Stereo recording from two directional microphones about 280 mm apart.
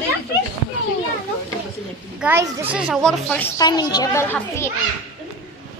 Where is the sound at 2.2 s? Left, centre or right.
Centre.